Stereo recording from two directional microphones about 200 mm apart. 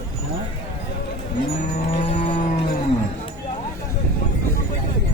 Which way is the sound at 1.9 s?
30° left (ahead or behind).